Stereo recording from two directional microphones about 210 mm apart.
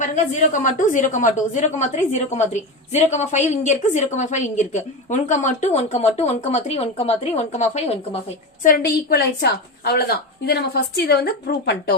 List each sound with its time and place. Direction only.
0.0 s a woman's voice: 35° left (ahead or behind)
8.6 s a woman's voice: 45° left (ahead or behind)